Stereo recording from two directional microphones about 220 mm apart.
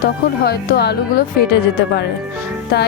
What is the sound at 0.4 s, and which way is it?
Speech, 45° left (ahead or behind).